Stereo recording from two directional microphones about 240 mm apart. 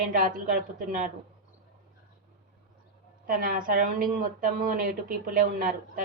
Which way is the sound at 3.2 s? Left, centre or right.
Right.